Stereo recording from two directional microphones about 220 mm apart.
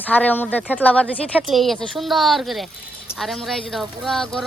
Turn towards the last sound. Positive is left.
turn(degrees=0)  # may be behind; listen again after turning